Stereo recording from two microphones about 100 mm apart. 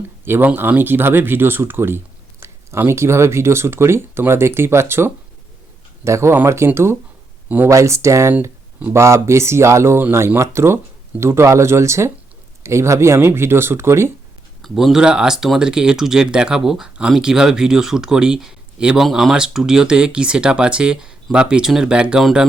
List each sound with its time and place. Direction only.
0.3 s speech: 20° right (ahead or behind)
7.4 s a sound: 15° right (ahead or behind)
7.7 s speech: 30° right (ahead or behind)
14.6 s speech: centre (ahead or behind)